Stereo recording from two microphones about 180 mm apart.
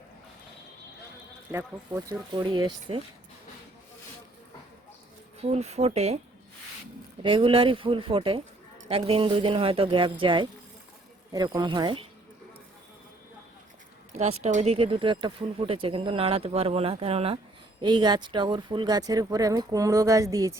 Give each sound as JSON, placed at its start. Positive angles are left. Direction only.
{"t": 1.5, "sound": "speech", "side_deg": -20}
{"t": 5.4, "sound": "speech", "side_deg": -35}
{"t": 7.2, "sound": "speech", "side_deg": -30}
{"t": 14.1, "sound": "speech", "side_deg": -35}